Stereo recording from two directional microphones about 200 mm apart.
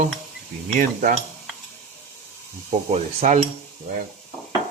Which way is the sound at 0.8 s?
40° right (ahead or behind).